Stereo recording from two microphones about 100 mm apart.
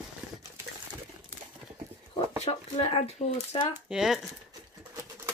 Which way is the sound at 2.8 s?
90° left.